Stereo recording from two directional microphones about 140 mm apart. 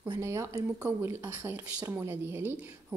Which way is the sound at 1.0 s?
20° right (ahead or behind).